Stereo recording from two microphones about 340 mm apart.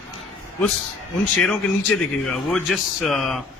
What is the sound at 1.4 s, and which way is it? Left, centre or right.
Speech, centre.